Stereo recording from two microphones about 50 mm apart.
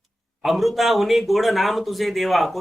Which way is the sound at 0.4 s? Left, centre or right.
Centre.